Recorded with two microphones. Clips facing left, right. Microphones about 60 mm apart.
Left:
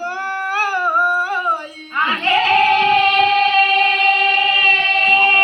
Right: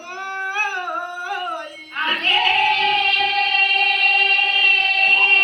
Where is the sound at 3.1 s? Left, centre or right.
Left.